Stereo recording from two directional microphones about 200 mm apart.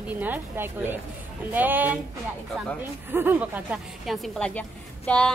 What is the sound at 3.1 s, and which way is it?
A woman's voice, 10° right (ahead or behind).